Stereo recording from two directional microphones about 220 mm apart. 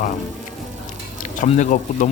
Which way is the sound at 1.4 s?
35° left (ahead or behind).